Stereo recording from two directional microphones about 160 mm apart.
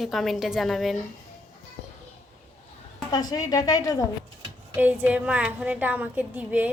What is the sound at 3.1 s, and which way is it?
Speech, 25° left (ahead or behind).